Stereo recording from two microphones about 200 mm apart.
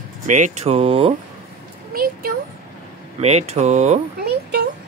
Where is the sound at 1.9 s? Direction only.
45° right (ahead or behind).